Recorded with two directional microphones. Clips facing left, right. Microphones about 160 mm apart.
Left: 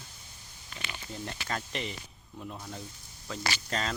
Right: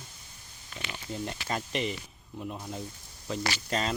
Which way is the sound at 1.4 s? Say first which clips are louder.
Right 4 dB; 15° right (ahead or behind).